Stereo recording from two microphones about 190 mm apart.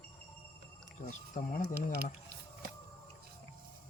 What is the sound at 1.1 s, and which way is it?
Speech, 40° left (ahead or behind).